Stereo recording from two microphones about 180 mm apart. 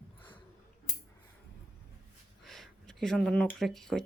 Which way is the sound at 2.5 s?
Centre (ahead or behind).